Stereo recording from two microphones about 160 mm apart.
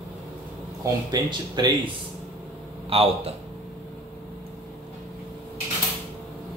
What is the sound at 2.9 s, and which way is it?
Speech, 35° right (ahead or behind).